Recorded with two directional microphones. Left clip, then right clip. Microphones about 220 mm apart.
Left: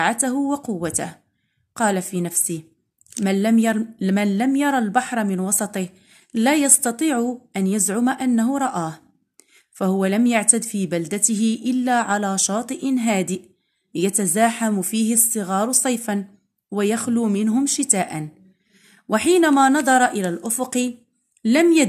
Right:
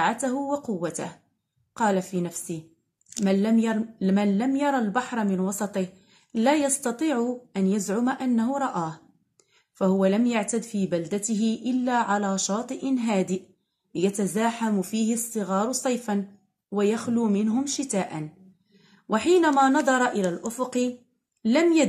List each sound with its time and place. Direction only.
0.0 s speech: 50° left (ahead or behind)